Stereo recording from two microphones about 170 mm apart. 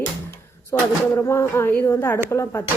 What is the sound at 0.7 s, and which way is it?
Speech, 15° left (ahead or behind).